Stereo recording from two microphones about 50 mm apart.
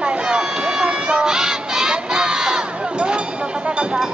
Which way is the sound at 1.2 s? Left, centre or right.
Centre.